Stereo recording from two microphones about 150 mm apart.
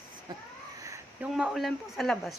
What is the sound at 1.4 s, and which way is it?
Speech, centre (ahead or behind).